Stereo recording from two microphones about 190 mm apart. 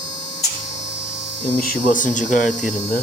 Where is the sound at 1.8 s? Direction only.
45° left (ahead or behind).